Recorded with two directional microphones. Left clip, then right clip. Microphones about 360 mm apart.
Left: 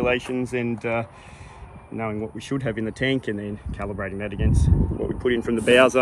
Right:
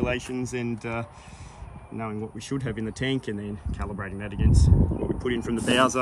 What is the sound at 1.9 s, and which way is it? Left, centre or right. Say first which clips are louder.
Speech: left 5 dB; centre.